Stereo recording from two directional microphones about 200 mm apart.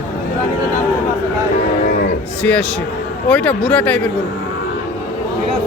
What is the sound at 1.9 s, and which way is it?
Cattle, 50° left (ahead or behind).